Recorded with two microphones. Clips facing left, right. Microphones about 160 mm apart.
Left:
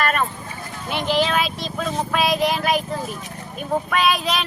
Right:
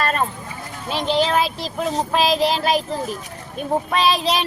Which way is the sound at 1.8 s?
30° right (ahead or behind).